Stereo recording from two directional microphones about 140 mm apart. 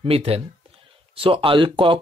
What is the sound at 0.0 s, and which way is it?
Speech, 45° right (ahead or behind).